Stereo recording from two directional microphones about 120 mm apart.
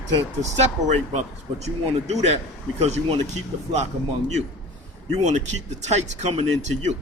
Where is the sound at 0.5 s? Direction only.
65° right (ahead or behind).